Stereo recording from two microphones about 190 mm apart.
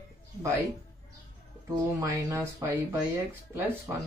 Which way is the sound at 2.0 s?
15° right (ahead or behind).